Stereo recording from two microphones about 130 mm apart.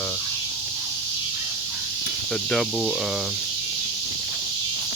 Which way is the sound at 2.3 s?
5° left (ahead or behind).